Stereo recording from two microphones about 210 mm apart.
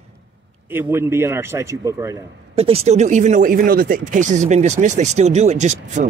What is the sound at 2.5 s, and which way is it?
Speech, 30° right (ahead or behind).